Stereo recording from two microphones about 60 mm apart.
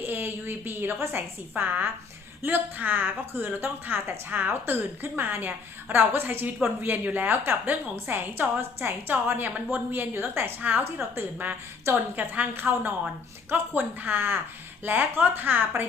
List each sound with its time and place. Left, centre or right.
0.0 s speech: right
10.6 s a woman's voice: right
10.8 s a woman's voice: right